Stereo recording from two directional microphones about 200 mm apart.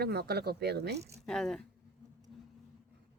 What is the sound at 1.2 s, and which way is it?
Speech, centre (ahead or behind).